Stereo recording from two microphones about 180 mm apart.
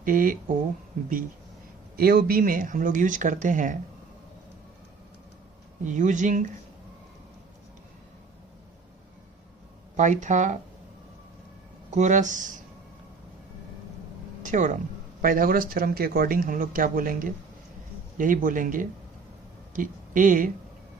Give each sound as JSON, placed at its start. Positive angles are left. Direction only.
{"t": 0.0, "sound": "speech", "side_deg": -50}
{"t": 2.0, "sound": "speech", "side_deg": -55}
{"t": 5.8, "sound": "speech", "side_deg": -45}
{"t": 10.0, "sound": "speech", "side_deg": -40}
{"t": 11.9, "sound": "speech", "side_deg": -45}
{"t": 14.4, "sound": "speech", "side_deg": -45}